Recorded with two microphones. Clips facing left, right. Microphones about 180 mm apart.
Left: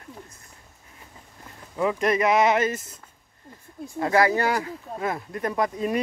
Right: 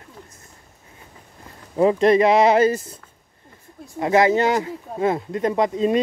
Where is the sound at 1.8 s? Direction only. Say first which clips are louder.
Right 7 dB; 30° right (ahead or behind).